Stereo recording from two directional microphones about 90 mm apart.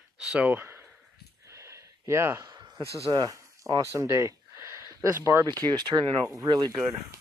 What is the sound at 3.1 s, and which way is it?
Speech, 50° right (ahead or behind).